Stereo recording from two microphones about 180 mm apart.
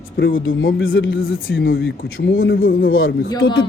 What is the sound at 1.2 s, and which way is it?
Speech, 55° left (ahead or behind).